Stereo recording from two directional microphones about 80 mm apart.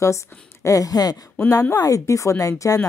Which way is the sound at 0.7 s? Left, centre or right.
Left.